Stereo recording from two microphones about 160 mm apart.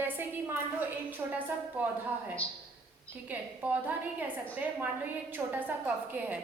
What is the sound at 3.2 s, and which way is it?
A woman's voice, 10° right (ahead or behind).